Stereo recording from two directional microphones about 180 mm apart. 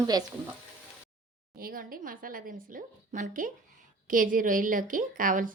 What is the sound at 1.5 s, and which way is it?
A woman's voice, 55° right (ahead or behind).